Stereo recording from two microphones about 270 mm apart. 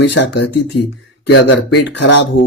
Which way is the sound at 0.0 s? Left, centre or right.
Left.